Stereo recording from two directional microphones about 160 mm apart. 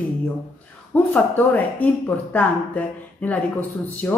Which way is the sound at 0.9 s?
10° left (ahead or behind).